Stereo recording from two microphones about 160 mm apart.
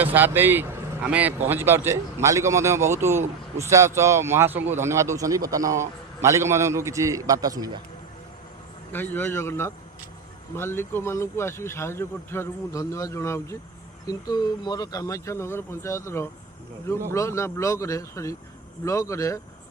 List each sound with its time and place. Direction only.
0.0 s a man's voice: 10° right (ahead or behind)
8.9 s a man's voice: 10° left (ahead or behind)